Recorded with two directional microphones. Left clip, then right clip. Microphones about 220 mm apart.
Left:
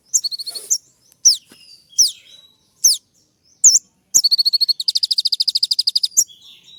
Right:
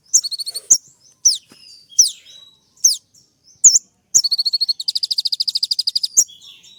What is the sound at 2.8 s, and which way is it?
Chirp, 15° left (ahead or behind).